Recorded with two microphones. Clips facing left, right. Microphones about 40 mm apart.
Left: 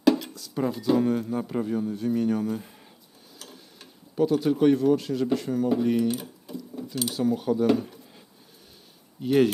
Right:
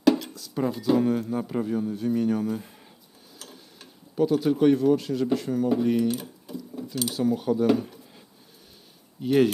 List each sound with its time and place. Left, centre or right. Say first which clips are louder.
0.2 s speech: even; centre
9.2 s speech: even; centre